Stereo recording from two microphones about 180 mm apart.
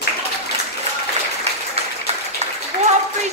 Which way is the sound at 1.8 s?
35° right (ahead or behind).